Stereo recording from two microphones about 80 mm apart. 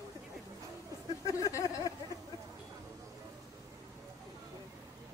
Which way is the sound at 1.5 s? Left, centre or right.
Left.